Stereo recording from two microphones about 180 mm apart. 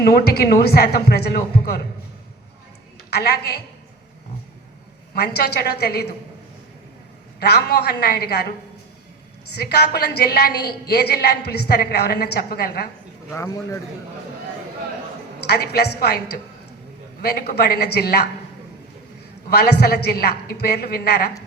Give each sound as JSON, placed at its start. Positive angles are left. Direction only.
{"t": 0.0, "sound": "a woman's voice", "side_deg": 60}
{"t": 3.1, "sound": "a woman's voice", "side_deg": 65}
{"t": 5.1, "sound": "a woman's voice", "side_deg": 65}
{"t": 7.3, "sound": "a woman's voice", "side_deg": 65}
{"t": 9.6, "sound": "a woman's voice", "side_deg": 65}
{"t": 13.3, "sound": "a man's voice", "side_deg": 15}
{"t": 15.4, "sound": "a woman's voice", "side_deg": 65}
{"t": 19.5, "sound": "a woman's voice", "side_deg": 60}